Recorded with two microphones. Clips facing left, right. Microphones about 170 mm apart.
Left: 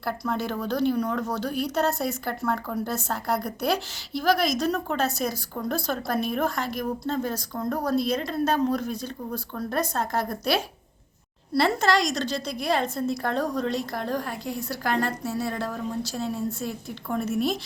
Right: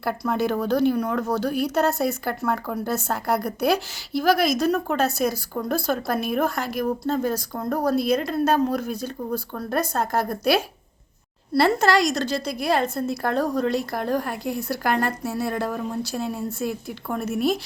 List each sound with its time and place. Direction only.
0.3 s a woman's voice: 10° right (ahead or behind)